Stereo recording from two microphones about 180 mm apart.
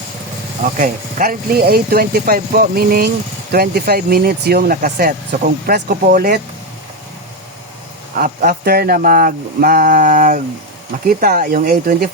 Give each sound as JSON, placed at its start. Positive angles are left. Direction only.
{"t": 0.6, "sound": "speech", "side_deg": -50}
{"t": 8.1, "sound": "speech", "side_deg": -50}